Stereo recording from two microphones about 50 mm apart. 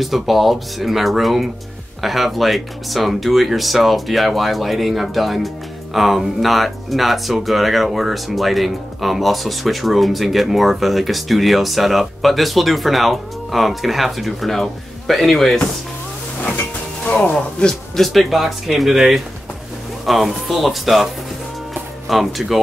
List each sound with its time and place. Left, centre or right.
0.0 s speech: centre
16.4 s music: left
17.9 s speech: centre